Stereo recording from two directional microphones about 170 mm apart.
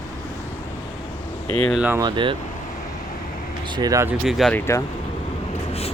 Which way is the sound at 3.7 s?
20° right (ahead or behind).